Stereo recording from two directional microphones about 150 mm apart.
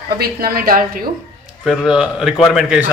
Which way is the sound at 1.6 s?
5° right (ahead or behind).